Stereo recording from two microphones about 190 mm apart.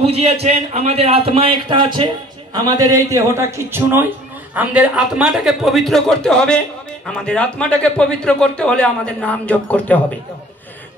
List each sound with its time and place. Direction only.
0.0 s a man's voice: 35° right (ahead or behind); by 10.0 s 5° left (ahead or behind)